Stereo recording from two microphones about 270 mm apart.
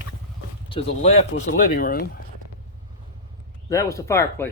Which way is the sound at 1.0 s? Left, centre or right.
Left.